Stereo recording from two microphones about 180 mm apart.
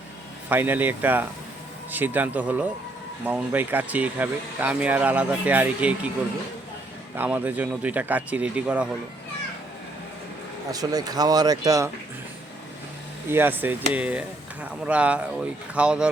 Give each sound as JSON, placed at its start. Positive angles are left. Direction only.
{"t": 0.5, "sound": "speech", "side_deg": -10}
{"t": 7.2, "sound": "speech", "side_deg": -10}
{"t": 10.7, "sound": "speech", "side_deg": -20}
{"t": 13.3, "sound": "speech", "side_deg": -10}